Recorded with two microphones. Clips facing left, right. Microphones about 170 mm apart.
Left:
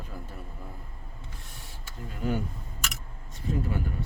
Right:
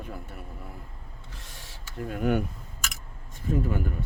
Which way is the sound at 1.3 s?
90° right.